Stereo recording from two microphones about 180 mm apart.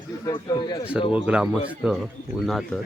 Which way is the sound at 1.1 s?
5° right (ahead or behind).